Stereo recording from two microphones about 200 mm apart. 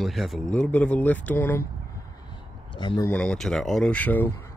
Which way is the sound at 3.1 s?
5° left (ahead or behind).